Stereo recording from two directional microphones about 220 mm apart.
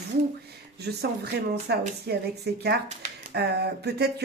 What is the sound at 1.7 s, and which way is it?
Speech, 45° right (ahead or behind).